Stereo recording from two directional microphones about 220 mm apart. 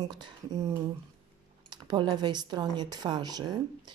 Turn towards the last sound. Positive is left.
turn(degrees=-20)  # may be behind; listen again after turning